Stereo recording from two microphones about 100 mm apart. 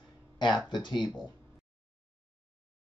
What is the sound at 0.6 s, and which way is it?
Speech, 45° left (ahead or behind).